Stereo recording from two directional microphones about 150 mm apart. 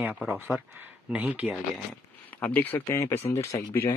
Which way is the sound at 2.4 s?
10° left (ahead or behind).